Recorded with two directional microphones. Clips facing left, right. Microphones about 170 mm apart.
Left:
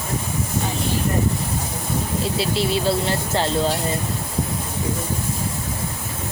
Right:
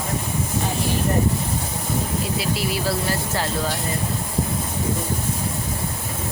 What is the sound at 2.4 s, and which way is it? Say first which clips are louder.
Speech: left 3 dB; 25° left (ahead or behind).